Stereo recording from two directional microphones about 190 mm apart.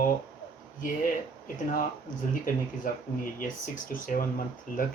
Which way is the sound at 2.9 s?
45° left (ahead or behind).